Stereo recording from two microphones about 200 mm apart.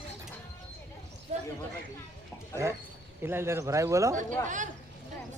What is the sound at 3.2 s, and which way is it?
Speech, 10° right (ahead or behind).